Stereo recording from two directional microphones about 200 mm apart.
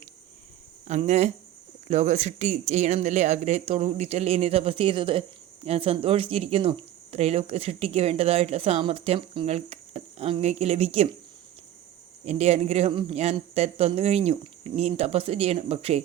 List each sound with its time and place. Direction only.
0.9 s speech: 35° right (ahead or behind)
12.2 s speech: 30° right (ahead or behind)